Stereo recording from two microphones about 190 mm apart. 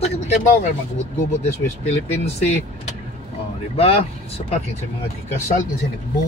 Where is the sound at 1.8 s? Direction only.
35° left (ahead or behind).